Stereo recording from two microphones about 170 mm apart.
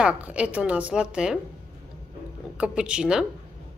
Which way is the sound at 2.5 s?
5° right (ahead or behind).